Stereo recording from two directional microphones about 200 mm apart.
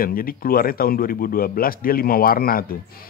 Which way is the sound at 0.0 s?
45° left (ahead or behind).